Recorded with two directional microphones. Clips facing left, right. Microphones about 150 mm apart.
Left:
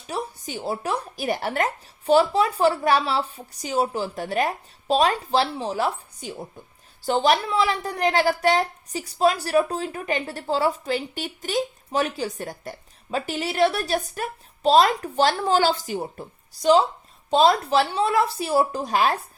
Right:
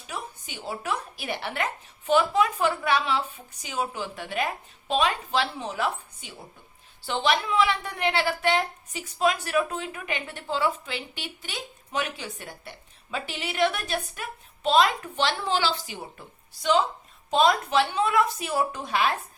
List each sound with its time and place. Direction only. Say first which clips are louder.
0.1 s a woman's voice: left 7 dB; 40° left (ahead or behind)